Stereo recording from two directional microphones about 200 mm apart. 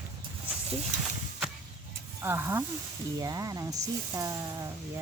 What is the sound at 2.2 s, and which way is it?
Speech, 10° right (ahead or behind).